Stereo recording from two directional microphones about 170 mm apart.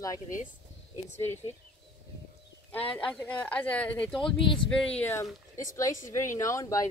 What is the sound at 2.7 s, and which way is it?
Speech, 10° left (ahead or behind).